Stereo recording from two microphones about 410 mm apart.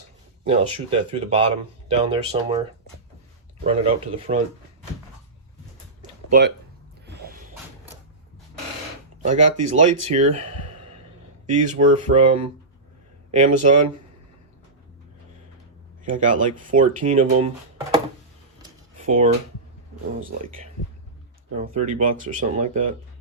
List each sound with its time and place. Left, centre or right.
0.4 s speech: centre
3.6 s speech: centre
6.0 s a sound: centre
7.0 s music: right
9.2 s speech: centre
11.4 s speech: centre
16.0 s speech: centre
18.6 s a sound: centre
21.5 s speech: centre